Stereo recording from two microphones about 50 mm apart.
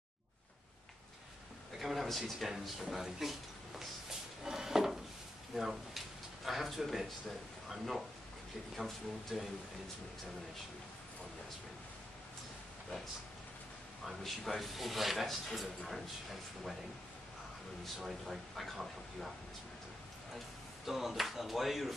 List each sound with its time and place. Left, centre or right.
1.8 s a man's voice: centre
4.5 s a sound: centre
5.6 s a man's voice: centre
14.0 s a man's voice: centre
17.9 s a man's voice: centre
20.3 s speech: centre